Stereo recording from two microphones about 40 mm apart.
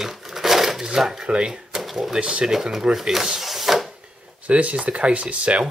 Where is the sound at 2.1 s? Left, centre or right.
Right.